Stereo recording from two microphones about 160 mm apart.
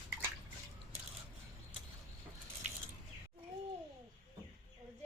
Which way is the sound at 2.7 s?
50° right (ahead or behind).